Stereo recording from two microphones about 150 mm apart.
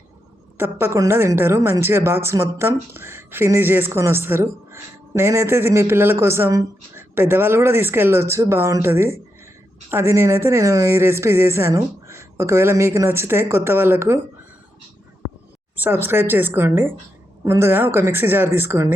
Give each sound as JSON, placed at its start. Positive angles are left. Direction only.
{"t": 0.5, "sound": "speech", "side_deg": -15}
{"t": 15.2, "sound": "a sound", "side_deg": 20}
{"t": 15.7, "sound": "speech", "side_deg": -15}